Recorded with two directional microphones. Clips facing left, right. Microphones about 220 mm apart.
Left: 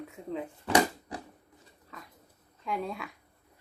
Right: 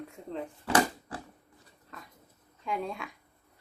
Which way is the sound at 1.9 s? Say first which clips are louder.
Even; centre (ahead or behind).